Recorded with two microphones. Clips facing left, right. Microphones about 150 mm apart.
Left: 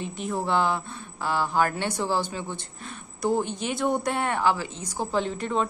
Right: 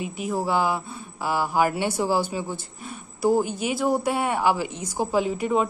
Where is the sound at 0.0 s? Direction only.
5° right (ahead or behind).